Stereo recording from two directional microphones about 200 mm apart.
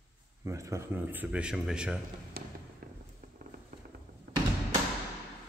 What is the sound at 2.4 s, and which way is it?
Fireworks, 50° right (ahead or behind).